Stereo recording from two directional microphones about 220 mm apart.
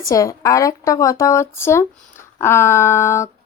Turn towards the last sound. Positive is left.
turn(degrees=10)  # may be behind; listen again after turning